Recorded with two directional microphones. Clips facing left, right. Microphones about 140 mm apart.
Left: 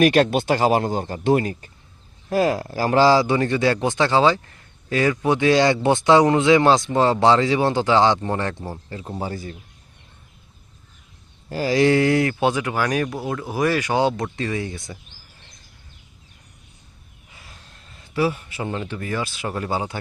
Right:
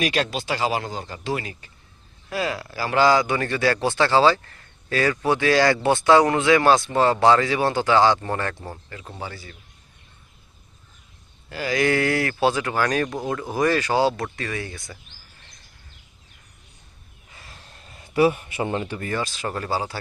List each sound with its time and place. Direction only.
0.0 s speech: 50° left (ahead or behind)
3.0 s speech: 30° left (ahead or behind)
11.4 s speech: 35° left (ahead or behind)
17.3 s vehicle: centre (ahead or behind)
18.1 s a man's voice: 20° right (ahead or behind)
18.9 s speech: 5° left (ahead or behind); by 20.0 s 20° left (ahead or behind)